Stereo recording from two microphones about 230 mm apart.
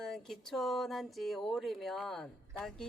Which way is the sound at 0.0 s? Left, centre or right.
Centre.